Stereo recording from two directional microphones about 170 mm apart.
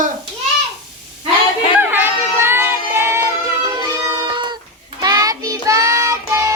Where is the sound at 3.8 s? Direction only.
25° right (ahead or behind).